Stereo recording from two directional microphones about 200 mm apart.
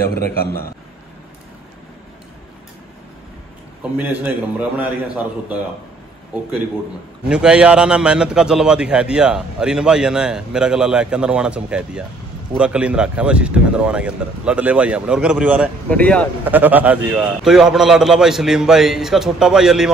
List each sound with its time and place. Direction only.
0.1 s a man's voice: 50° left (ahead or behind)
4.0 s a man's voice: 10° right (ahead or behind)
7.2 s a man's voice: 5° right (ahead or behind)
15.9 s speech: 5° left (ahead or behind)
16.4 s a man's voice: 10° right (ahead or behind)